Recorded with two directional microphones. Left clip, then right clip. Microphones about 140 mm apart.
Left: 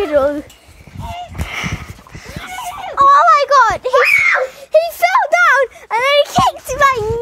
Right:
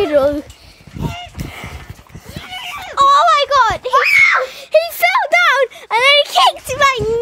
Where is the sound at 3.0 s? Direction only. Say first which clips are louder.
Left 1 dB; 50° right (ahead or behind).